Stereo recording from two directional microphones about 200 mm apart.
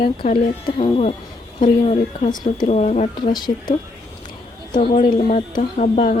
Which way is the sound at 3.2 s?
20° left (ahead or behind).